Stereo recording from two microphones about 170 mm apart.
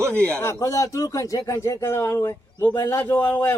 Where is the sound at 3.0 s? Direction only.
10° left (ahead or behind).